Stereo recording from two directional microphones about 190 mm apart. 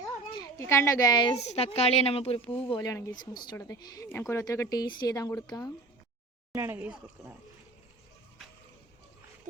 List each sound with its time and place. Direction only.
0.0 s a sound: 20° left (ahead or behind)
1.4 s a woman's voice: 35° left (ahead or behind)
2.6 s a woman's voice: 20° left (ahead or behind)
6.5 s speech: 15° right (ahead or behind)